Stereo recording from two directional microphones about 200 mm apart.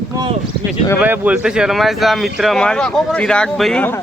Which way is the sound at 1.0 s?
10° right (ahead or behind).